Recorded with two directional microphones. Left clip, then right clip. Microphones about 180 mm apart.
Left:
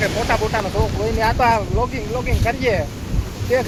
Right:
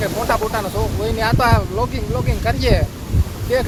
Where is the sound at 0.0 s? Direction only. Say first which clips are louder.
Even; 10° right (ahead or behind).